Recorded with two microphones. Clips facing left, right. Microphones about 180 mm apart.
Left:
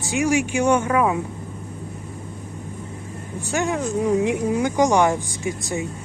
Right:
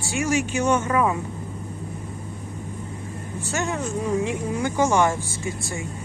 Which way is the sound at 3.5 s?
15° left (ahead or behind).